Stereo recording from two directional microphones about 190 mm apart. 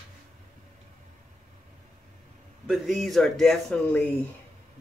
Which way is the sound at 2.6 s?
Centre (ahead or behind).